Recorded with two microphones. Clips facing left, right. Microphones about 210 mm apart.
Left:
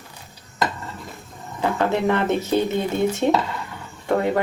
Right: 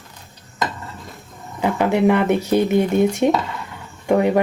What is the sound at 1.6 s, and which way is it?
Speech, 15° right (ahead or behind).